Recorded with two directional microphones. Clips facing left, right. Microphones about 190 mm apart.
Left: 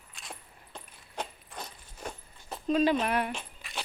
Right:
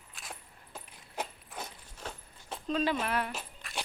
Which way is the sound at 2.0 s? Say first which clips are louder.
Left 3 dB; 10° left (ahead or behind).